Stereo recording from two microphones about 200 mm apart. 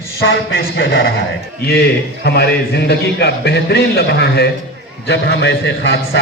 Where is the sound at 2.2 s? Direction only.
55° left (ahead or behind).